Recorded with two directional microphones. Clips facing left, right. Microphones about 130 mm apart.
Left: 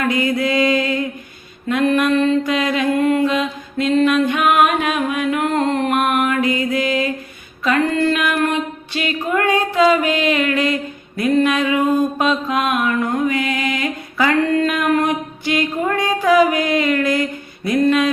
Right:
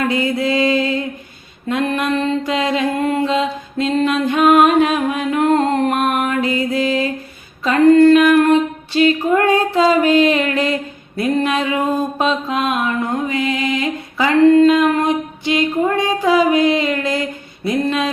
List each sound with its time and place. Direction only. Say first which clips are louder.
0.0 s mantra: even; 30° right (ahead or behind)
7.6 s female singing: right 8 dB; 35° right (ahead or behind)
11.2 s a sound: left 1 dB; 35° right (ahead or behind)
12.2 s mantra: even; 30° right (ahead or behind)